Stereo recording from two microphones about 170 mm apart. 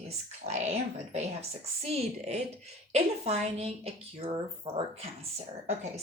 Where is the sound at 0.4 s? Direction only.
40° right (ahead or behind).